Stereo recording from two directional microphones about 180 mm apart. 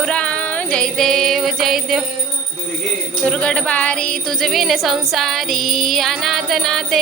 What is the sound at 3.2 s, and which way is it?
Music, 5° left (ahead or behind).